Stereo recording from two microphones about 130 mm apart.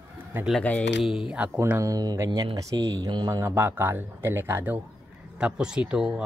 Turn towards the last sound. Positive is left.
turn(degrees=-5)  # may be behind; listen again after turning